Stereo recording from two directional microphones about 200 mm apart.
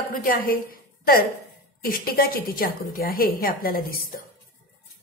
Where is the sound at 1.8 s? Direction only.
45° left (ahead or behind).